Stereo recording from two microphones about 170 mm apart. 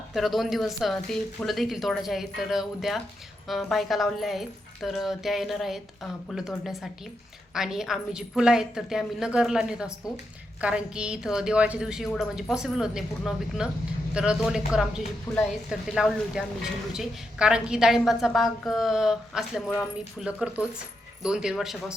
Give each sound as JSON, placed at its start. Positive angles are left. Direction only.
{"t": 0.1, "sound": "a woman's voice", "side_deg": 0}
{"t": 15.3, "sound": "speech", "side_deg": 15}
{"t": 15.7, "sound": "a woman's voice", "side_deg": -5}